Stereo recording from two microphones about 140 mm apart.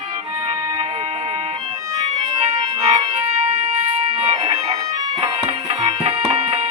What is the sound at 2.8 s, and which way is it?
Organ, 50° right (ahead or behind).